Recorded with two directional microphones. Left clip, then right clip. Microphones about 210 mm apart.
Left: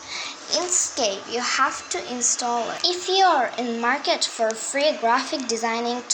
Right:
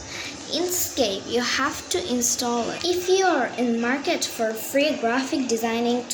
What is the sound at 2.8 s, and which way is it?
A woman's voice, 20° left (ahead or behind).